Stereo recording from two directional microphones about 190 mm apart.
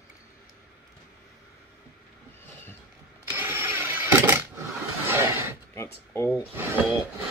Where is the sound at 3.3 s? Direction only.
10° right (ahead or behind).